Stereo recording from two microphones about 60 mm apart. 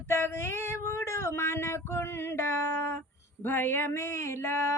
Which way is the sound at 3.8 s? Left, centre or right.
Left.